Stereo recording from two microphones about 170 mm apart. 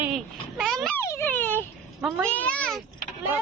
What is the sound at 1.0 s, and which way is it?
A child's voice, 15° left (ahead or behind).